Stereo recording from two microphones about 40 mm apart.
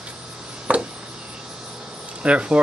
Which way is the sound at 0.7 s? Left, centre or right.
Right.